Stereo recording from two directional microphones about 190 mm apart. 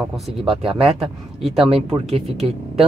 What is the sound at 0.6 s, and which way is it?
Speech, 30° right (ahead or behind).